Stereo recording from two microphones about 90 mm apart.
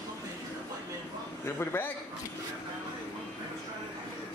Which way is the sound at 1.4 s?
25° left (ahead or behind).